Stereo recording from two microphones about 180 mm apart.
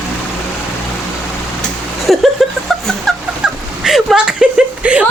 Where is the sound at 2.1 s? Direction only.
Centre (ahead or behind).